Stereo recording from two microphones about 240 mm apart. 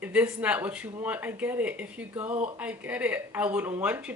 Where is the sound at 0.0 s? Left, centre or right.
Centre.